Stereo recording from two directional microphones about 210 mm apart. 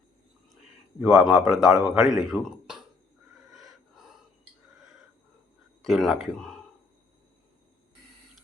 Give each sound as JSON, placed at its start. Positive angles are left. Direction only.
{"t": 1.0, "sound": "speech", "side_deg": 0}
{"t": 3.5, "sound": "a sound", "side_deg": 0}
{"t": 5.8, "sound": "speech", "side_deg": 0}